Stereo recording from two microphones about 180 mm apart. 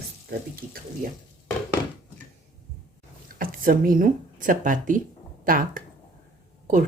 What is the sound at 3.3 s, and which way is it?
Speech, 50° right (ahead or behind).